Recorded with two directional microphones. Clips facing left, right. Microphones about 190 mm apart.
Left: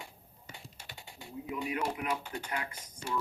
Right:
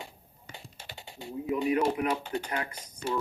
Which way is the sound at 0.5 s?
25° right (ahead or behind).